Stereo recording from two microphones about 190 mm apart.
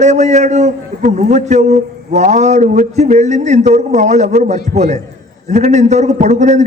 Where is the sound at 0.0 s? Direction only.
40° right (ahead or behind).